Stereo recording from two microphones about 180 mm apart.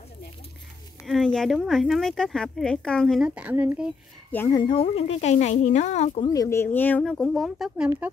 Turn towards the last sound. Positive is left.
turn(degrees=-5)  # may be behind; listen again after turning